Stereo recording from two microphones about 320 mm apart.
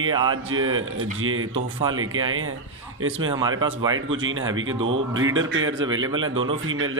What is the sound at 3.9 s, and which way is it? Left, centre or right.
Speech, right.